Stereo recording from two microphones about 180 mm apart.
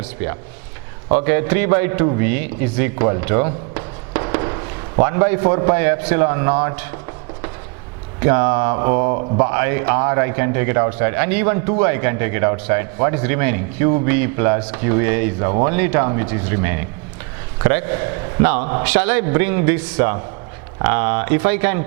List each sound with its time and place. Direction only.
0.0 s a man's voice: 15° right (ahead or behind)
8.2 s a man's voice: 15° right (ahead or behind)